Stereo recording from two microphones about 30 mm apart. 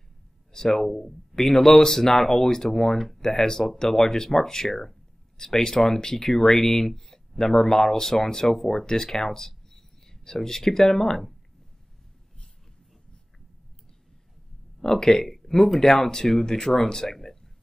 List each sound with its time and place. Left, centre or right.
0.7 s speech: centre
14.8 s speech: left
15.2 s speech: centre
15.8 s speech: centre